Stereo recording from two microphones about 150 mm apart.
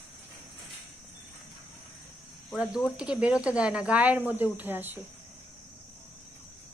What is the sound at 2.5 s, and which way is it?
Speech, centre (ahead or behind).